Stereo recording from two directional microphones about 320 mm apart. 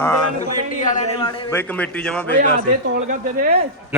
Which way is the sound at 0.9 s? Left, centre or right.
Centre.